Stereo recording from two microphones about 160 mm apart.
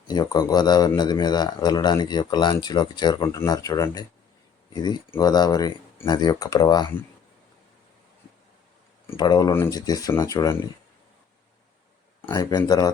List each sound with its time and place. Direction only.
0.1 s speech: 25° left (ahead or behind)
9.1 s speech: 25° left (ahead or behind)
12.3 s speech: 25° left (ahead or behind)